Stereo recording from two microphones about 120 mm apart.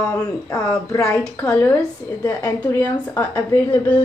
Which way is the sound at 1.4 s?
15° left (ahead or behind).